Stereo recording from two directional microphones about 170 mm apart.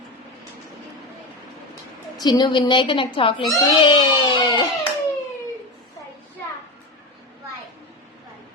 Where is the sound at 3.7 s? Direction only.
30° left (ahead or behind).